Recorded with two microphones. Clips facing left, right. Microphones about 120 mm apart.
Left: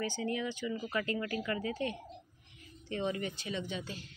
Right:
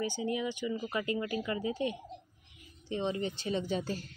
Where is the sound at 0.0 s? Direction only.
15° right (ahead or behind); by 4.1 s 40° right (ahead or behind).